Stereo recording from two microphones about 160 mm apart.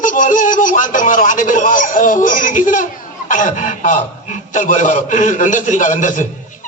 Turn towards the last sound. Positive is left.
turn(degrees=55)  # may be behind; listen again after turning